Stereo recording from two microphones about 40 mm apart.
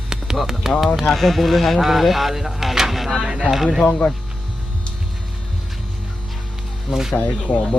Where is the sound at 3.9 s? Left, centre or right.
Left.